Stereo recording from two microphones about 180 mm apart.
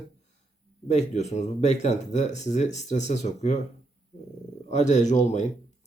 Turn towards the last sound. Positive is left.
turn(degrees=40)  # may be behind; listen again after turning